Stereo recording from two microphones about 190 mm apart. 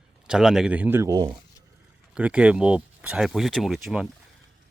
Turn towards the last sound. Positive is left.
turn(degrees=0)  # may be behind; listen again after turning